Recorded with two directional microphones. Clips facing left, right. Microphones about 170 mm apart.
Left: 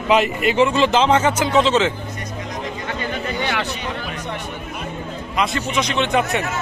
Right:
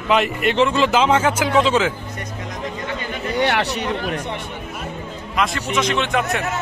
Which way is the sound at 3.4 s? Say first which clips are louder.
Right 4 dB; 70° right (ahead or behind).